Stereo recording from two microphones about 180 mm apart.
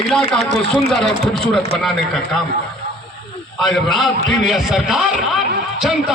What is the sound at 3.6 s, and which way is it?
A man's voice, centre (ahead or behind).